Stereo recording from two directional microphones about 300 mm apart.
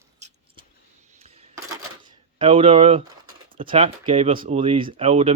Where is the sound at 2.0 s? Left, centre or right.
Centre.